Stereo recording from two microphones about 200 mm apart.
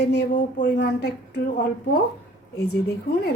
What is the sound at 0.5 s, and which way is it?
Speech, 45° left (ahead or behind).